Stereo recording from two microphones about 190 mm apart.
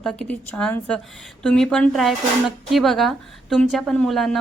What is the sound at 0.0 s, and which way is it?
A woman's voice, centre (ahead or behind).